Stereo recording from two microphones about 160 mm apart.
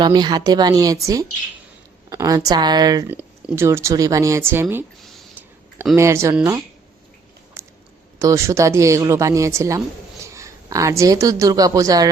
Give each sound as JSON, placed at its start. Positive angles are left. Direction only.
{"t": 0.0, "sound": "speech", "side_deg": -25}
{"t": 3.1, "sound": "speech", "side_deg": -10}
{"t": 6.0, "sound": "speech", "side_deg": -20}
{"t": 7.6, "sound": "chewing", "side_deg": -15}
{"t": 8.2, "sound": "speech", "side_deg": -20}